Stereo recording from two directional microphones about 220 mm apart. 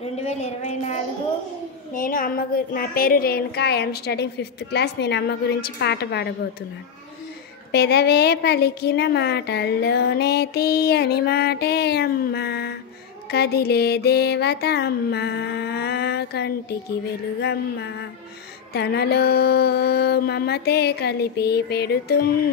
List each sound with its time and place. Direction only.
0.2 s a woman's voice: 30° left (ahead or behind)
2.0 s a woman's voice: 40° left (ahead or behind)
7.7 s a woman's voice: 50° left (ahead or behind)